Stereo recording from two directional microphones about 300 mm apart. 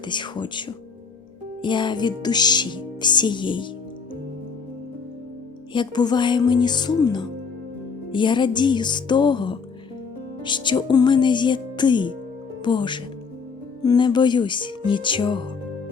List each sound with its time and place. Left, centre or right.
0.0 s speech: centre
1.6 s speech: centre
5.7 s speech: centre